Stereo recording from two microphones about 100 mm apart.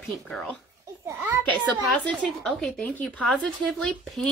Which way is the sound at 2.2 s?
5° left (ahead or behind).